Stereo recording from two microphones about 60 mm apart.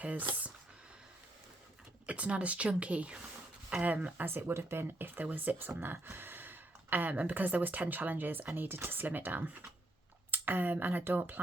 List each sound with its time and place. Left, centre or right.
0.0 s speech: right
2.0 s speech: right
4.3 s speech: right